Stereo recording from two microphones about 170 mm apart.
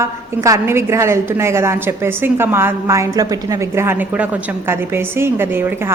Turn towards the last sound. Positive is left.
turn(degrees=-10)  # may be behind; listen again after turning